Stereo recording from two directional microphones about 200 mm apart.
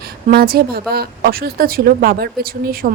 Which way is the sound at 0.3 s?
50° right (ahead or behind).